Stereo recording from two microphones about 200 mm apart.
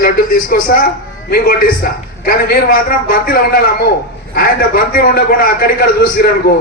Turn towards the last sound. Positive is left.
turn(degrees=50)  # may be behind; listen again after turning